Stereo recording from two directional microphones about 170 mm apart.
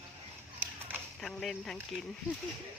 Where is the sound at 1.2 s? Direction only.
Centre (ahead or behind).